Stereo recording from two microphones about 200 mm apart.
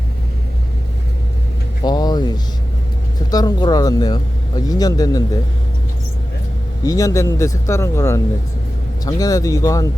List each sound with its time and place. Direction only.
1.8 s vehicle: 20° left (ahead or behind)
3.3 s speech: 20° left (ahead or behind)
6.8 s speech: 15° left (ahead or behind)